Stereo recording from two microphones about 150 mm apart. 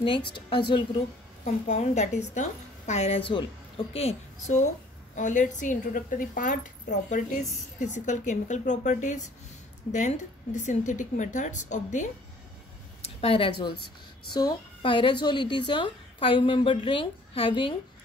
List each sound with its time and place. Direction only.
0.0 s a woman's voice: 35° left (ahead or behind)
1.4 s a woman's voice: 50° left (ahead or behind)
5.1 s a woman's voice: 55° left (ahead or behind)
13.2 s a woman's voice: 35° left (ahead or behind)